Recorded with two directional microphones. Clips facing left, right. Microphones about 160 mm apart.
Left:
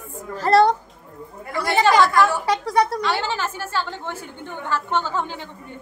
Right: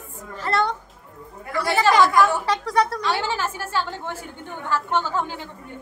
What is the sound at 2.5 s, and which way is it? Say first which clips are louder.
Speech: left 2 dB; 10° left (ahead or behind).